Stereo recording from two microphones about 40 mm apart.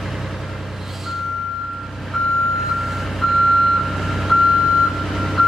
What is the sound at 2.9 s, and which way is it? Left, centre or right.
Reversing beeps, centre.